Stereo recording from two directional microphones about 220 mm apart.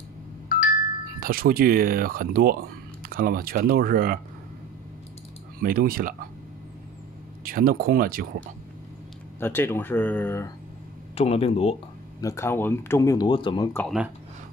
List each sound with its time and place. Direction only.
0.5 s music: 40° left (ahead or behind)
1.2 s speech: 40° right (ahead or behind)
5.6 s speech: 40° right (ahead or behind)
7.4 s speech: 40° right (ahead or behind)
9.4 s speech: 10° left (ahead or behind)
11.1 s speech: 25° left (ahead or behind)
12.2 s speech: 15° left (ahead or behind)
13.7 s speech: centre (ahead or behind)